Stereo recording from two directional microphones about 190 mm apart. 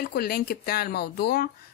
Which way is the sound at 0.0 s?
55° left (ahead or behind).